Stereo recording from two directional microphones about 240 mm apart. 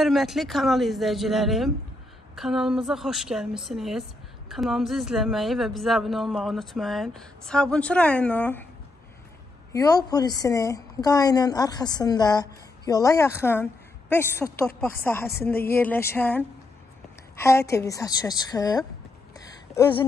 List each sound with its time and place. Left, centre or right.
0.0 s a woman's voice: centre
9.7 s a woman's voice: centre
19.3 s a sound: centre